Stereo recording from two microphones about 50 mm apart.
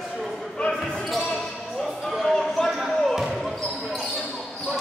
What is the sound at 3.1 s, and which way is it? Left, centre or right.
Basketball bounce, centre.